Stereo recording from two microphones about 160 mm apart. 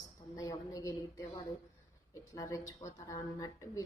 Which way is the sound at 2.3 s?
20° left (ahead or behind).